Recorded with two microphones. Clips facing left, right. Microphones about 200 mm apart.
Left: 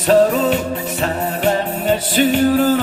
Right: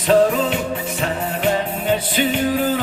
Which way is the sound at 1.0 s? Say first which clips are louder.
Left 3 dB; 40° left (ahead or behind).